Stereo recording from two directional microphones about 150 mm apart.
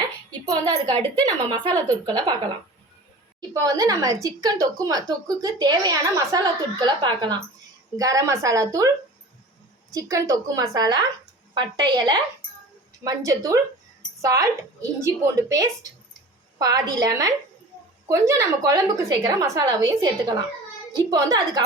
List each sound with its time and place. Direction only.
0.4 s speech: 25° right (ahead or behind)
9.9 s speech: 20° right (ahead or behind)